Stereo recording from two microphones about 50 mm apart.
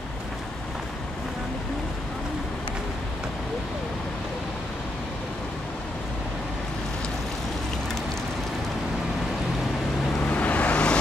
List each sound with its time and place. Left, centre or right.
10.2 s vehicle: left